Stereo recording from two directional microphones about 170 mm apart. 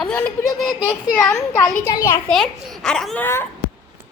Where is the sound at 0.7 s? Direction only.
25° left (ahead or behind).